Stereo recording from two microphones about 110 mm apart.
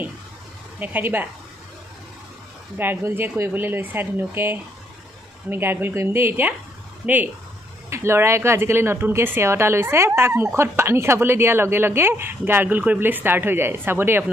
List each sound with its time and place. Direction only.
0.7 s speech: 15° right (ahead or behind)
2.8 s speech: 20° right (ahead or behind)
7.9 s speech: 25° right (ahead or behind)